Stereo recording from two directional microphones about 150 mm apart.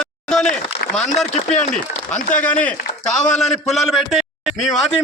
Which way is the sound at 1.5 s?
55° left (ahead or behind).